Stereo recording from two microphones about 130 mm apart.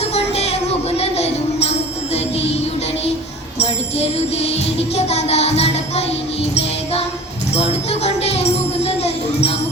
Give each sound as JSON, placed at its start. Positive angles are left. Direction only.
{"t": 0.0, "sound": "music", "side_deg": 55}
{"t": 3.6, "sound": "music", "side_deg": 55}